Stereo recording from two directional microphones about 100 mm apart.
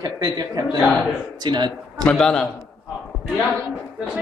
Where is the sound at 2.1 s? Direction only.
10° left (ahead or behind).